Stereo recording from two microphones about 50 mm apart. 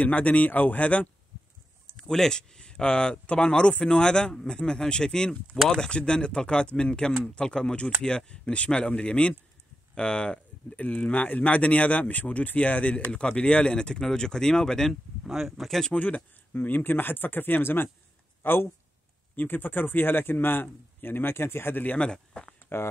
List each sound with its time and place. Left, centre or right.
0.0 s speech: left
2.0 s speech: centre
10.7 s speech: left; by 14.9 s centre
15.2 s speech: centre
16.5 s speech: left
21.8 s speech: left